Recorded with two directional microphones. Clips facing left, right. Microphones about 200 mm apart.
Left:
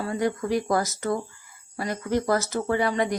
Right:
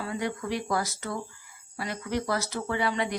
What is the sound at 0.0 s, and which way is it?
A woman's voice, 40° left (ahead or behind).